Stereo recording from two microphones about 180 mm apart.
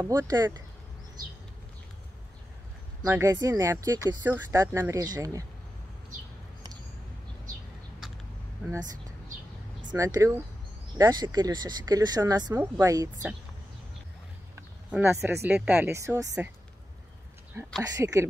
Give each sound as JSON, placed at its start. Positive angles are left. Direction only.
{"t": 0.0, "sound": "speech", "side_deg": -20}
{"t": 3.1, "sound": "speech", "side_deg": -15}
{"t": 9.8, "sound": "speech", "side_deg": -20}
{"t": 14.5, "sound": "speech", "side_deg": -10}
{"t": 17.8, "sound": "speech", "side_deg": -20}